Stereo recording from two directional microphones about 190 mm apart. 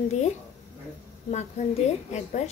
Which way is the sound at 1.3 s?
35° left (ahead or behind).